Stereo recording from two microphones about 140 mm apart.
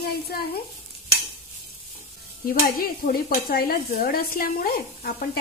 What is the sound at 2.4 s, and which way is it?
Stir, 90° left.